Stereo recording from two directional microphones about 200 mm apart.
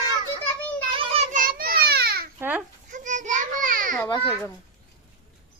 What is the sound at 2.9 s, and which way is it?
Children playing, 40° right (ahead or behind).